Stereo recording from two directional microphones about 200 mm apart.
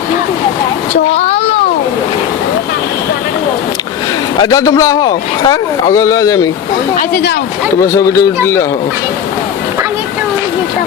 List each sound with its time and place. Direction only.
1.1 s a child's voice: 30° left (ahead or behind)
4.4 s a man's voice: 20° left (ahead or behind)
7.1 s speech: 50° left (ahead or behind)
7.9 s a man's voice: 15° left (ahead or behind)